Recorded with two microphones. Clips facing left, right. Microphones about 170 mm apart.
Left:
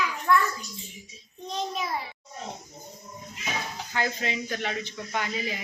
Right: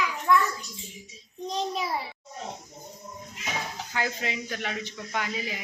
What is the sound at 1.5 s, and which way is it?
Speech, 35° right (ahead or behind).